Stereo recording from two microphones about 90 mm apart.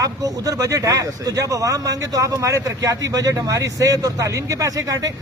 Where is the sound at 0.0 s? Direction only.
40° right (ahead or behind).